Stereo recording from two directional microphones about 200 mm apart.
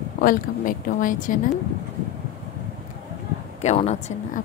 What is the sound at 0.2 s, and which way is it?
Speech, 45° left (ahead or behind).